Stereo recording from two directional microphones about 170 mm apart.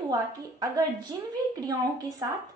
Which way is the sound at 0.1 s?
25° right (ahead or behind).